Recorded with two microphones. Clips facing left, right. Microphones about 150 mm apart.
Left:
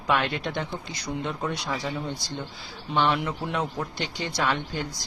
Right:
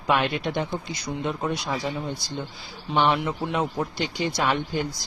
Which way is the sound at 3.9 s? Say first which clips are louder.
Right 3 dB; 15° right (ahead or behind).